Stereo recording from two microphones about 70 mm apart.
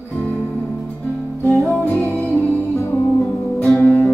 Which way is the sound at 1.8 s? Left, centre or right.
Left.